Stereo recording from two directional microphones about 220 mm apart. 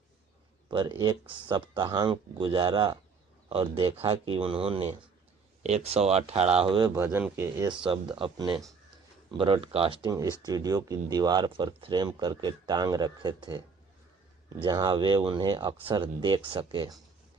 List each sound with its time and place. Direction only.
0.7 s speech: 20° right (ahead or behind)
6.9 s speech: 10° right (ahead or behind)
7.9 s speech: 25° right (ahead or behind)
14.6 s speech: 20° right (ahead or behind)